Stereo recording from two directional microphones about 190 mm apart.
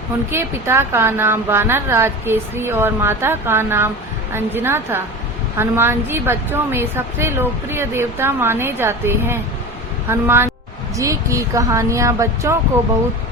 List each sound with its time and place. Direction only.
0.3 s a woman's voice: 10° right (ahead or behind)